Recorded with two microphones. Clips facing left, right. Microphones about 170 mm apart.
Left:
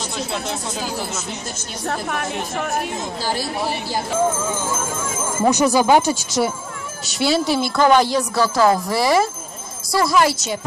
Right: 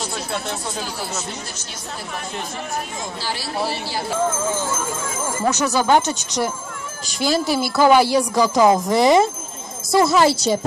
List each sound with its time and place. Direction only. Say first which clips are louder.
1.9 s speech: left 7 dB; 65° left (ahead or behind)
5.4 s speech: left 5 dB; 15° left (ahead or behind); by 10.6 s 35° right (ahead or behind)